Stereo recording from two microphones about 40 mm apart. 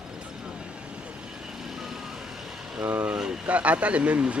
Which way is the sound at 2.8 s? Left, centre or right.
Right.